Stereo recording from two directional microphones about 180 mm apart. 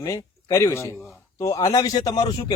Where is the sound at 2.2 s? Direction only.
35° left (ahead or behind).